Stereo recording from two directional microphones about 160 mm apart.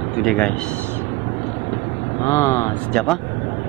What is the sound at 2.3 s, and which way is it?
Speech, 20° left (ahead or behind).